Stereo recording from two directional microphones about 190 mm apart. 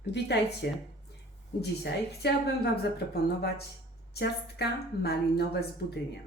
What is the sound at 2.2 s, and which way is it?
Speech, 60° left (ahead or behind).